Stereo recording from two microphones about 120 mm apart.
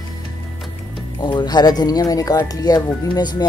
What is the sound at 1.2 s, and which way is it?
Speech, 35° left (ahead or behind).